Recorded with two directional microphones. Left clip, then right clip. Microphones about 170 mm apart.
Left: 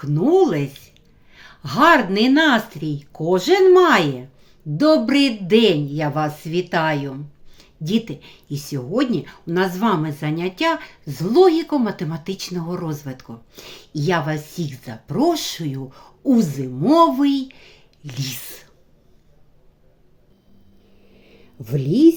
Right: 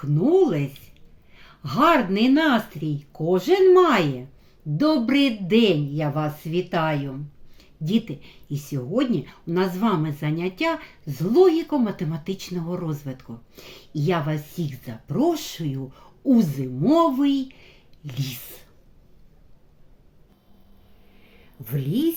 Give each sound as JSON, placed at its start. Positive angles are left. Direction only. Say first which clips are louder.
{"t": 0.0, "sound": "speech", "louder": "left 3 dB", "side_deg": -10}
{"t": 21.6, "sound": "a woman's voice", "louder": "left 10 dB", "side_deg": 30}